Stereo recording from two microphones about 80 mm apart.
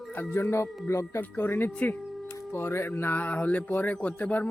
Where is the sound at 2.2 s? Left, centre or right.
Left.